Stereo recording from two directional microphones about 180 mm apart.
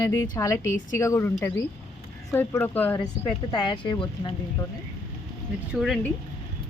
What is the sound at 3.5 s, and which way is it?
Speech, 25° left (ahead or behind).